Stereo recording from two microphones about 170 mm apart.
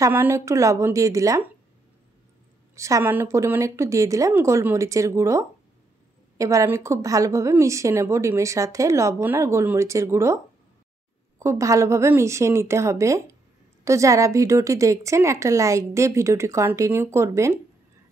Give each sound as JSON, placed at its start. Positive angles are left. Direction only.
{"t": 0.0, "sound": "a woman's voice", "side_deg": -15}
{"t": 2.7, "sound": "a woman's voice", "side_deg": -15}